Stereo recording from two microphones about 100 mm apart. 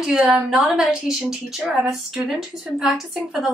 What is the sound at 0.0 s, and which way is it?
Speech, 5° right (ahead or behind).